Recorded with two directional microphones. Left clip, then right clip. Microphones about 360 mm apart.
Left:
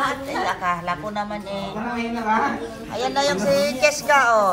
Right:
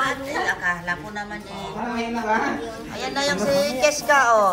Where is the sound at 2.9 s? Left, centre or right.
Centre.